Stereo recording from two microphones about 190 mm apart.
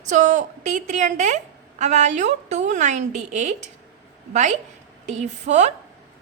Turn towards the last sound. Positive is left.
turn(degrees=-35)  # may be behind; listen again after turning